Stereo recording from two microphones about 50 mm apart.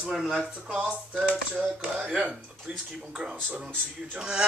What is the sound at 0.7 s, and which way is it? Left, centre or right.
Speech, right.